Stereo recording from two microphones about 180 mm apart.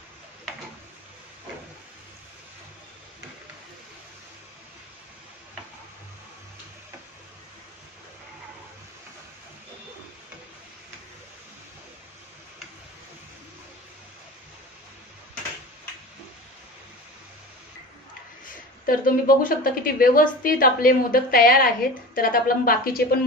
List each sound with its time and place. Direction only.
18.4 s a woman's voice: 50° left (ahead or behind)